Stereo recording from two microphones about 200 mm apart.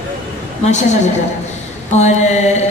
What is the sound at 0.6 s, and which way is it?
Speech, 35° left (ahead or behind).